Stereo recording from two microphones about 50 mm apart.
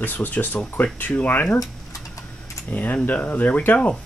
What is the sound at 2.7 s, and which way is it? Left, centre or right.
Speech, left.